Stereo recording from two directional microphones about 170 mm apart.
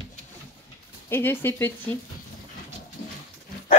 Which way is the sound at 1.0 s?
15° left (ahead or behind).